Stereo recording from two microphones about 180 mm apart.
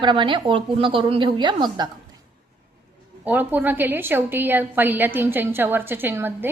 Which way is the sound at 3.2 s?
10° right (ahead or behind).